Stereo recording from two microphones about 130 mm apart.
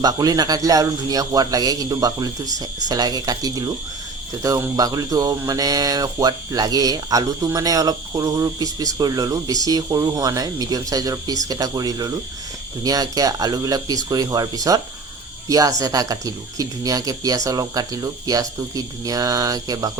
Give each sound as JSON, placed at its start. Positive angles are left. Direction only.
{"t": 0.0, "sound": "speech", "side_deg": -30}